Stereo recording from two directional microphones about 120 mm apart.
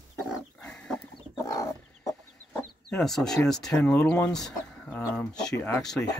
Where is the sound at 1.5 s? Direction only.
30° left (ahead or behind).